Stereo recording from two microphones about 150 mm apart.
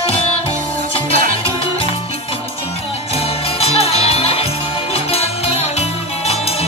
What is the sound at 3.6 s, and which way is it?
Music, 40° left (ahead or behind).